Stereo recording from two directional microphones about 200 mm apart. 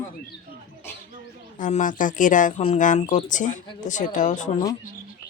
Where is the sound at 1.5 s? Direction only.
40° left (ahead or behind).